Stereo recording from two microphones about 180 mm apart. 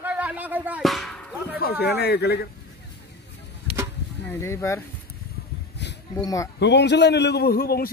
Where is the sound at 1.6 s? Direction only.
60° left (ahead or behind).